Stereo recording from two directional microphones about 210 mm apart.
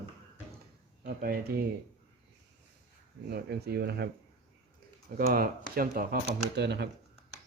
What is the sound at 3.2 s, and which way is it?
Speech, 50° right (ahead or behind).